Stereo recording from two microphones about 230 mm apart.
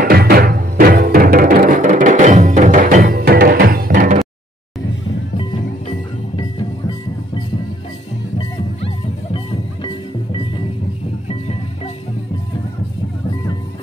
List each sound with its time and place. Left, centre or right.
0.0 s music: right
5.4 s music: left
8.4 s music: left